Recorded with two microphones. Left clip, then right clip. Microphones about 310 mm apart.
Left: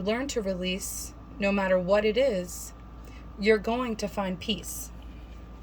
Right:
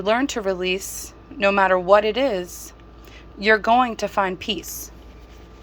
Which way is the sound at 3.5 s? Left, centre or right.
Right.